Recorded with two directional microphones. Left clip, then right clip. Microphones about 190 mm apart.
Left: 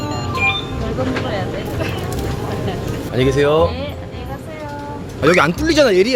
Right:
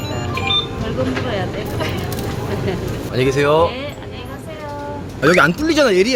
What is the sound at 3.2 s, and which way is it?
Speech, 5° right (ahead or behind).